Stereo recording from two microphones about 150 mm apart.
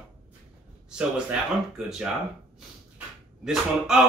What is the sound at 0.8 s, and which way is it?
A man's voice, 5° right (ahead or behind).